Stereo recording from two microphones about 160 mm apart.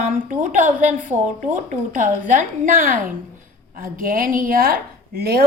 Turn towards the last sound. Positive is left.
turn(degrees=-70)  # may be behind; listen again after turning